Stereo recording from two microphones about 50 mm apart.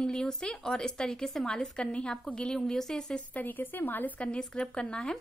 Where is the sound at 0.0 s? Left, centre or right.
Centre.